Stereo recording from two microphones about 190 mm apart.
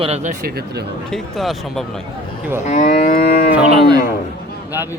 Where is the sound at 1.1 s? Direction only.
Centre (ahead or behind).